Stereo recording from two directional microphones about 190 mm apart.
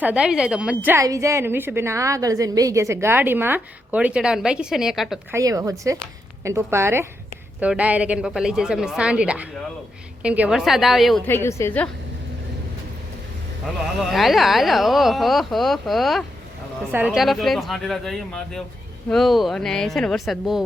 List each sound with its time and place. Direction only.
0.0 s a woman's voice: 5° right (ahead or behind)
5.3 s a woman's voice: 20° right (ahead or behind); by 11.2 s centre (ahead or behind)
11.3 s a woman's voice: 15° left (ahead or behind)
14.0 s speech: centre (ahead or behind)